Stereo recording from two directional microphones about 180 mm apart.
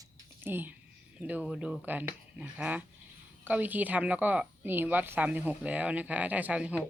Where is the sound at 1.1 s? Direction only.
10° right (ahead or behind).